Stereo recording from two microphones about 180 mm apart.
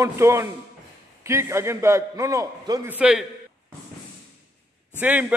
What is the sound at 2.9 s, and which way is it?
Speech, 5° right (ahead or behind).